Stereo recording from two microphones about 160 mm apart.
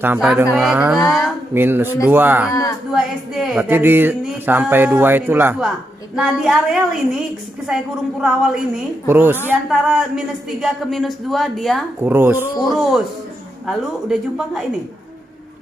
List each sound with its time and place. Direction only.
0.0 s speech: 10° right (ahead or behind)
0.9 s speech: 20° left (ahead or behind)
1.5 s speech: 15° right (ahead or behind)
2.5 s speech: 20° left (ahead or behind)
2.9 s speech: centre (ahead or behind)
6.1 s speech: centre (ahead or behind)
8.2 s speech: 5° right (ahead or behind)
12.0 s speech: 15° right (ahead or behind)
12.6 s speech: centre (ahead or behind)